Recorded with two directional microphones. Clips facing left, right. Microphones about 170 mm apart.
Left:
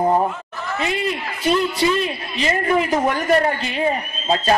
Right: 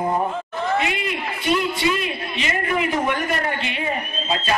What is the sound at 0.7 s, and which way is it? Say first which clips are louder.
A man's voice: left 1 dB; 35° left (ahead or behind).